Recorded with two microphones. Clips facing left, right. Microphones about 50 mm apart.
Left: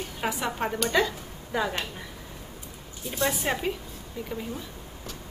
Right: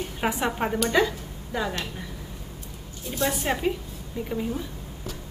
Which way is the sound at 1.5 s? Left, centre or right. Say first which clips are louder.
Left 1 dB; centre.